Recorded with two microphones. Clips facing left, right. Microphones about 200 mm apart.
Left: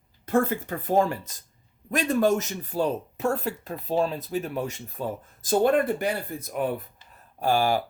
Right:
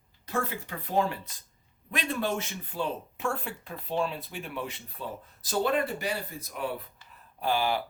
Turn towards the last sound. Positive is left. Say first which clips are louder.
# left 5 dB
turn(degrees=45)  # may be behind; listen again after turning